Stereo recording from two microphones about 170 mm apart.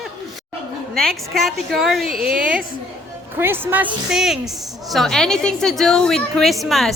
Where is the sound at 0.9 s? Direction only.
Centre (ahead or behind).